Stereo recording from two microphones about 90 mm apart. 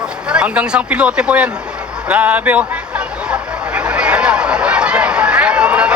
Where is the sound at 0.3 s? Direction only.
10° right (ahead or behind).